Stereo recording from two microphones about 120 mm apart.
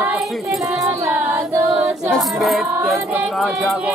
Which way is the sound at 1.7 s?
5° right (ahead or behind).